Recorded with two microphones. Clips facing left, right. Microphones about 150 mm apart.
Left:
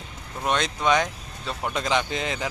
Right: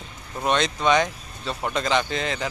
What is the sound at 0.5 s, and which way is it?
Speech, 5° left (ahead or behind).